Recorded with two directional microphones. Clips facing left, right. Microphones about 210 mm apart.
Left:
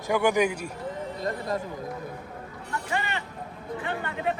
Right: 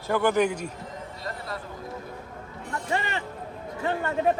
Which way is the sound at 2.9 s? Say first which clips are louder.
Right 2 dB; 30° right (ahead or behind).